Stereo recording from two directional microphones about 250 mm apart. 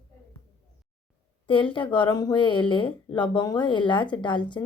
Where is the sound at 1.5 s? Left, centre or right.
Centre.